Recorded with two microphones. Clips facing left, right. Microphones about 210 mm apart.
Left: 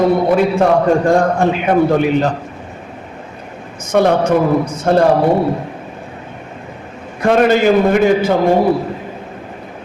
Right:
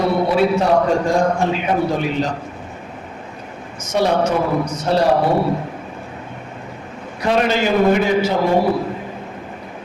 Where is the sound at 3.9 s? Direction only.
55° left (ahead or behind).